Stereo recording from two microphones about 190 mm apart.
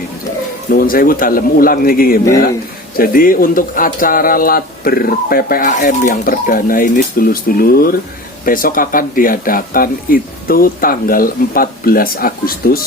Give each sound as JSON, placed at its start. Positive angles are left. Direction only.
{"t": 0.7, "sound": "speech", "side_deg": 50}